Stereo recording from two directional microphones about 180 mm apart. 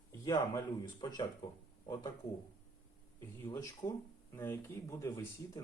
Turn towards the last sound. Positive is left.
turn(degrees=20)  # may be behind; listen again after turning